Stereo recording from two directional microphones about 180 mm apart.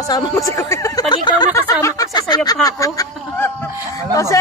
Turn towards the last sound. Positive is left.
turn(degrees=15)  # may be behind; listen again after turning